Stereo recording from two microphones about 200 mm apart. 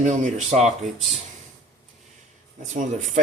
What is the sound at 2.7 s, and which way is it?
Speech, 40° right (ahead or behind).